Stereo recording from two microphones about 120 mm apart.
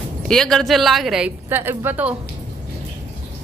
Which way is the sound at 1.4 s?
15° right (ahead or behind).